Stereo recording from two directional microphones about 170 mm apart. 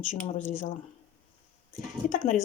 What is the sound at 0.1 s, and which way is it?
Speech, 50° left (ahead or behind).